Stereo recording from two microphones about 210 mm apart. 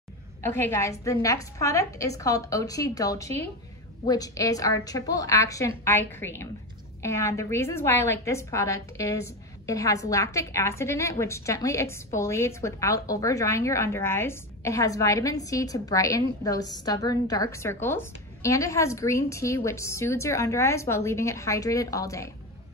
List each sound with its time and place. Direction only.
0.4 s a woman's voice: 10° left (ahead or behind)